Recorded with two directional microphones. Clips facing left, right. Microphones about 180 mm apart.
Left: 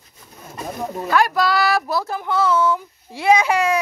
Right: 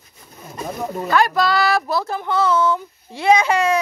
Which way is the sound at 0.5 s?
Centre (ahead or behind).